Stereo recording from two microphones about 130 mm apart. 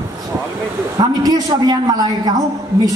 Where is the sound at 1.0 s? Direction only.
30° right (ahead or behind).